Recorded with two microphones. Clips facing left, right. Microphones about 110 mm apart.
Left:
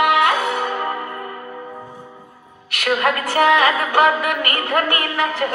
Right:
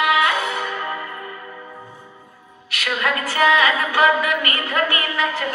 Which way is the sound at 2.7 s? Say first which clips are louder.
Left 4 dB; 55° left (ahead or behind).